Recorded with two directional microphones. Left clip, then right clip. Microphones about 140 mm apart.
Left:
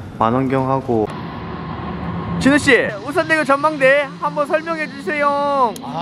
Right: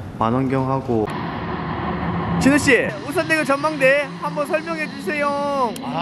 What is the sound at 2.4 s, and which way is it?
Speech, 10° left (ahead or behind).